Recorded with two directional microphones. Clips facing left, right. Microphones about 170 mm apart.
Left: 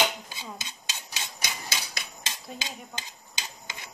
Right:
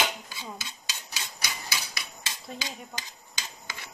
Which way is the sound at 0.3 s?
20° left (ahead or behind).